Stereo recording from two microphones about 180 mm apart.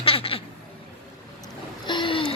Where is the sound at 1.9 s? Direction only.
25° left (ahead or behind).